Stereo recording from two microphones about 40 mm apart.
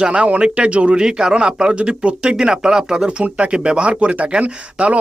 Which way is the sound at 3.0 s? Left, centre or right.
Right.